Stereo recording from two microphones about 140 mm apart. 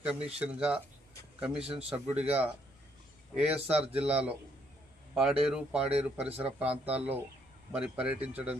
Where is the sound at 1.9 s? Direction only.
45° right (ahead or behind).